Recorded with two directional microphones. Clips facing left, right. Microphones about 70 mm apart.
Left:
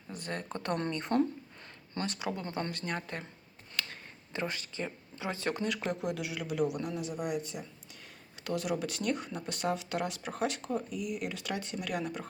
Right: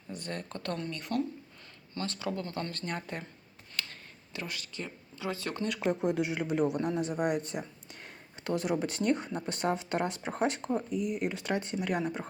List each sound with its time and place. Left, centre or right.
0.1 s speech: centre
0.5 s speech: centre
2.8 s speech: centre
3.8 s a sound: centre
4.3 s speech: left
5.9 s speech: right
8.4 s speech: right